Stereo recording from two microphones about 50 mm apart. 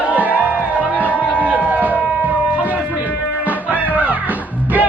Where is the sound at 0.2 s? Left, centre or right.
Left.